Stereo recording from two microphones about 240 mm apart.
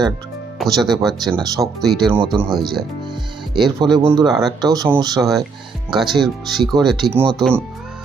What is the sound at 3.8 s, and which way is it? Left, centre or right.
Speech, centre.